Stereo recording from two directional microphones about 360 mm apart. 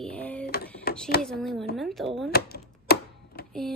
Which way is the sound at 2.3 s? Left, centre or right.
Left.